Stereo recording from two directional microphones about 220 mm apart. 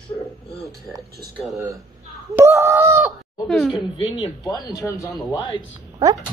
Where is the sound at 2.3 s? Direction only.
10° right (ahead or behind).